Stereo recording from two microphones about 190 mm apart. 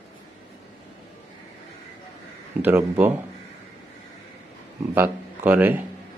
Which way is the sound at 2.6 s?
10° right (ahead or behind).